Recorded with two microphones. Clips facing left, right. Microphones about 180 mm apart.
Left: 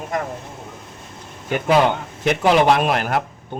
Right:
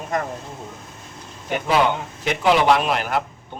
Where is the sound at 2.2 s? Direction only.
50° left (ahead or behind).